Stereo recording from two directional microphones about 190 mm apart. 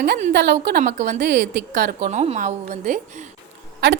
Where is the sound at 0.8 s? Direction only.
40° right (ahead or behind).